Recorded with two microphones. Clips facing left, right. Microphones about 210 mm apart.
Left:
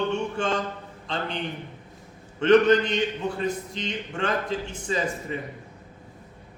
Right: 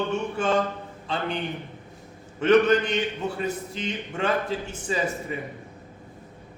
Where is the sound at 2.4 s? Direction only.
5° right (ahead or behind).